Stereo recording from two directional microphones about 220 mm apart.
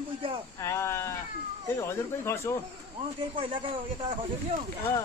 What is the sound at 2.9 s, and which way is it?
Speech, 25° right (ahead or behind).